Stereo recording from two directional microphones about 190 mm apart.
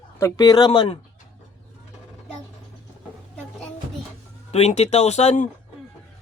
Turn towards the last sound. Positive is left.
turn(degrees=35)  # may be behind; listen again after turning